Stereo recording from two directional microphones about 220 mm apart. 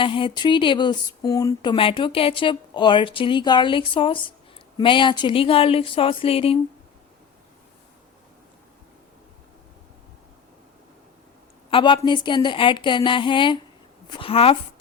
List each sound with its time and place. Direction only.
0.0 s speech: 25° left (ahead or behind)
11.7 s speech: 20° left (ahead or behind)